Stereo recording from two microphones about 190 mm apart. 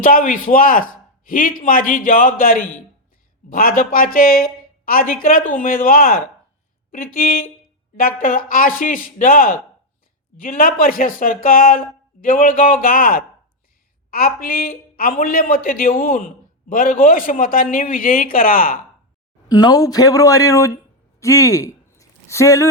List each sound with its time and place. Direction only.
0.0 s a man's voice: 45° left (ahead or behind)
19.5 s speech: 20° left (ahead or behind)
21.2 s a sound: 15° left (ahead or behind)